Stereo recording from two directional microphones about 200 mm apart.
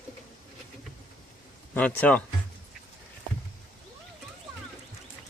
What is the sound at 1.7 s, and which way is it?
Speech, 10° left (ahead or behind).